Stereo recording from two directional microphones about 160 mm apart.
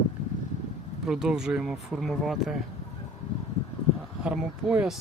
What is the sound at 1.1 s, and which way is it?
Speech, 5° right (ahead or behind).